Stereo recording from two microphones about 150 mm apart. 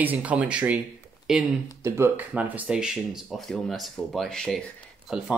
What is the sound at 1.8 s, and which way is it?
Speech, 15° right (ahead or behind).